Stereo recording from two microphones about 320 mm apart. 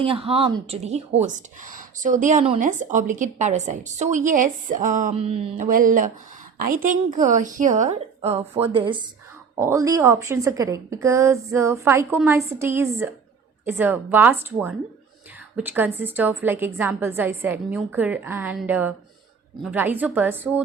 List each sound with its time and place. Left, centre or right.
0.0 s a woman's voice: centre